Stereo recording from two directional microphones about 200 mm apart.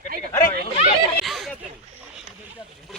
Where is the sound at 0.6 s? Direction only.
30° left (ahead or behind).